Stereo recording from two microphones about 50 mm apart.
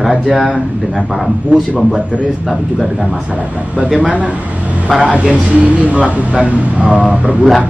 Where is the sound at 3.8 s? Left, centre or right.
Centre.